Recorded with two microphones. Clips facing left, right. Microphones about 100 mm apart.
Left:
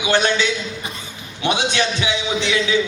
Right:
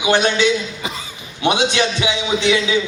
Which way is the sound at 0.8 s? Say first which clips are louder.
Right 4 dB; 90° right.